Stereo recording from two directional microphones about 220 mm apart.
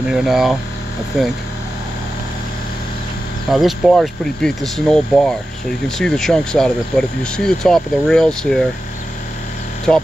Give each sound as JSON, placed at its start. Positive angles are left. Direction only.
{"t": 0.1, "sound": "speech", "side_deg": 0}
{"t": 3.4, "sound": "speech", "side_deg": 0}
{"t": 9.9, "sound": "speech", "side_deg": 0}